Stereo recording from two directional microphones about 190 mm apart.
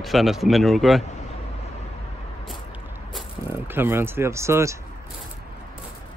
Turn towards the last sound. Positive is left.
turn(degrees=-15)  # may be behind; listen again after turning